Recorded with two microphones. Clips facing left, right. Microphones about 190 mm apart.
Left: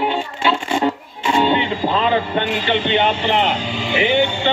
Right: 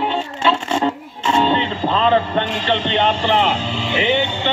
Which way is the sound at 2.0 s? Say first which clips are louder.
Right 2 dB; 30° right (ahead or behind).